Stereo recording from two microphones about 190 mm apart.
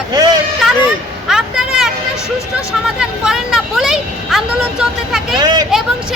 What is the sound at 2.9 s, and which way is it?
Speech, 5° right (ahead or behind).